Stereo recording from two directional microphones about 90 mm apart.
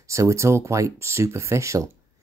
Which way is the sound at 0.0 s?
35° right (ahead or behind).